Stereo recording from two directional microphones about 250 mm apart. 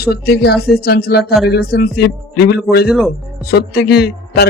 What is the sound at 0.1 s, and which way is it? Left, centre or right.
Speech, left.